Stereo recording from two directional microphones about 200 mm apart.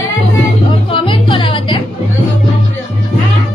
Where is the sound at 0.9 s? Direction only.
25° left (ahead or behind).